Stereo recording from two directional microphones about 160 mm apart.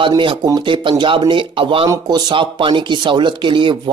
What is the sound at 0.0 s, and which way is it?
Speech, 30° right (ahead or behind).